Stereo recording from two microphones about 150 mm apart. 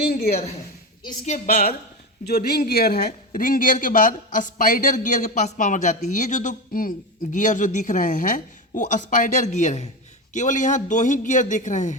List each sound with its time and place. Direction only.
0.0 s a woman's voice: 85° left
1.2 s a woman's voice: 50° left (ahead or behind)
2.2 s a man's voice: 90° left; by 11.9 s 55° left (ahead or behind)